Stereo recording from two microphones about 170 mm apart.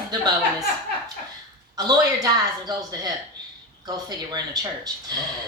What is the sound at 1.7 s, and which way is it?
A woman's voice, 20° right (ahead or behind).